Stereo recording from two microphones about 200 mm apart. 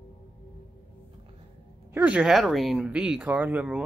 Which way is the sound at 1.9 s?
5° right (ahead or behind).